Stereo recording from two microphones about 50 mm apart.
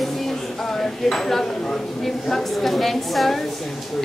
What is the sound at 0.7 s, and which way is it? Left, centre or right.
Speech, centre.